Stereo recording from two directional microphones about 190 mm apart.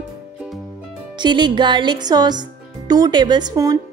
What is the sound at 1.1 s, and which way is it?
A woman's voice, 25° right (ahead or behind).